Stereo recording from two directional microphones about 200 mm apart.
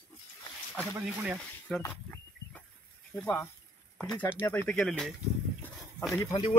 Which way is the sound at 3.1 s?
5° left (ahead or behind).